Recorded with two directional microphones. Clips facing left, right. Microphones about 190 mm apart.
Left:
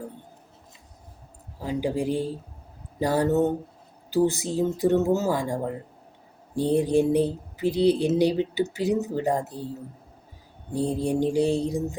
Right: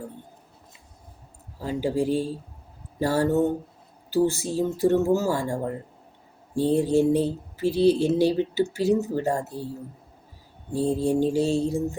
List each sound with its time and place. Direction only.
1.6 s speech: 15° left (ahead or behind)
6.6 s speech: 15° left (ahead or behind)
10.7 s speech: 15° left (ahead or behind)